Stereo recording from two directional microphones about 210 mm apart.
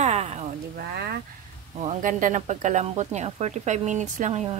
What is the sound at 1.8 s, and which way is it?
Speech, 40° right (ahead or behind).